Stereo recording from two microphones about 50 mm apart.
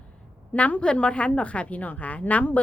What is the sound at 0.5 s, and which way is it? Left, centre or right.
A woman's voice, left.